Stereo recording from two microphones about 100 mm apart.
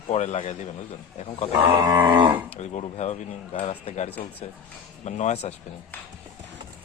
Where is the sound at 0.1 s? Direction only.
90° left.